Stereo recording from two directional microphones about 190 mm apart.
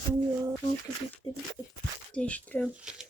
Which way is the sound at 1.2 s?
20° left (ahead or behind).